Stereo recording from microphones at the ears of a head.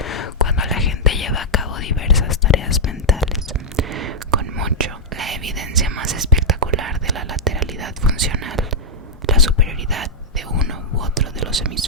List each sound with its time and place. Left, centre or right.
0.0 s whispering: left
3.8 s whispering: right